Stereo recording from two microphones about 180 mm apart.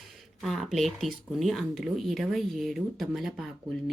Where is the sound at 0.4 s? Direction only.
Centre (ahead or behind).